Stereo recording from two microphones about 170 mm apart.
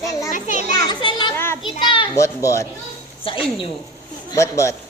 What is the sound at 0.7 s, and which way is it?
Speech, 25° left (ahead or behind).